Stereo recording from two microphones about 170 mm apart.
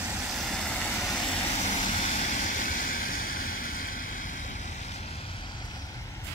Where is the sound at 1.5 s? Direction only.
45° left (ahead or behind).